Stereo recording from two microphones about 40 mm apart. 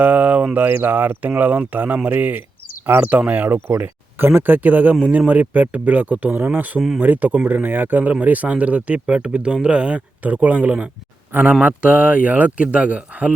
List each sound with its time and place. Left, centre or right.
0.0 s speech: right
1.3 s speech: right
10.2 s speech: right
11.6 s speech: right